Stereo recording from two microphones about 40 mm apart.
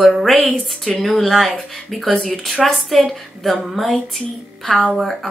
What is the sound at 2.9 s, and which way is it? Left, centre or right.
Speech, centre.